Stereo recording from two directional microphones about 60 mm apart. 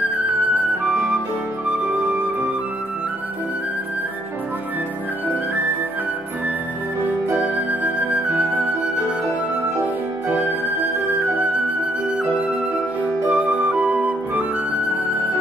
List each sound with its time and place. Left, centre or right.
7.8 s flute: right
10.2 s music: right
13.3 s flute: right